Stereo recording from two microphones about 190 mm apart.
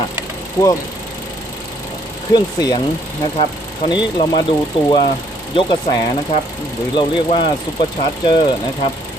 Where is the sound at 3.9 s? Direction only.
25° left (ahead or behind).